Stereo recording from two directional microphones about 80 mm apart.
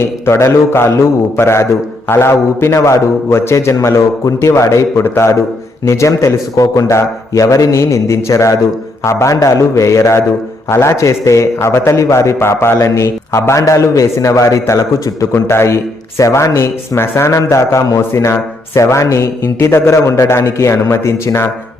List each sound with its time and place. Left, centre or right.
0.3 s a man's voice: left
15.3 s a man's voice: left